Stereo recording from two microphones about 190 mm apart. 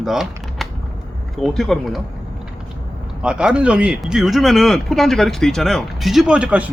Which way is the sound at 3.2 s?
5° right (ahead or behind).